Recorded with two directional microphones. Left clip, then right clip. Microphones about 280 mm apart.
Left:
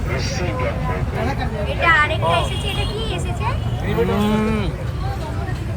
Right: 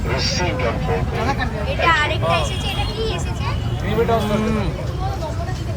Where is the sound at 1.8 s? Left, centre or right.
Centre.